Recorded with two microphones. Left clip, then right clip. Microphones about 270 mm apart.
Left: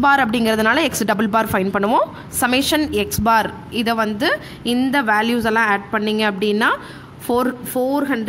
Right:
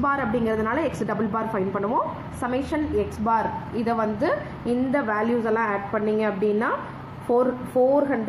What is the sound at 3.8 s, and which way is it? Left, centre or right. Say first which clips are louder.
Speech: left 5 dB; left.